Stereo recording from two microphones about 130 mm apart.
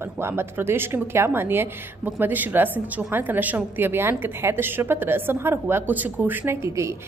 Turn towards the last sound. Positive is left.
turn(degrees=-20)  # may be behind; listen again after turning